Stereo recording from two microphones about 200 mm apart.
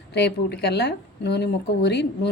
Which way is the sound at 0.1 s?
55° left (ahead or behind).